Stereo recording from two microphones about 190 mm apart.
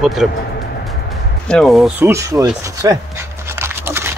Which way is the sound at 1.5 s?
Centre (ahead or behind).